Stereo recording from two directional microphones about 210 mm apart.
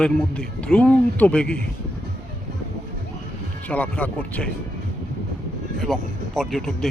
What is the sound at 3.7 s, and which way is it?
Speech, 5° left (ahead or behind).